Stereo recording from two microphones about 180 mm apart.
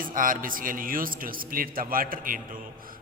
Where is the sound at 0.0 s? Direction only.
50° right (ahead or behind).